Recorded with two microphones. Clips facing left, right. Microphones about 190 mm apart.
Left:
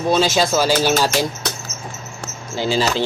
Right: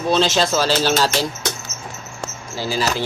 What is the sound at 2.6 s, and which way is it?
Speech, 25° left (ahead or behind).